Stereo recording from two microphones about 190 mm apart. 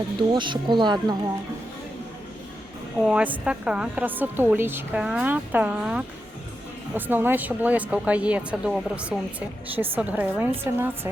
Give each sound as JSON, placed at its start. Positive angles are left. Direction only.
{"t": 0.2, "sound": "speech", "side_deg": -25}
{"t": 3.0, "sound": "a woman's voice", "side_deg": -5}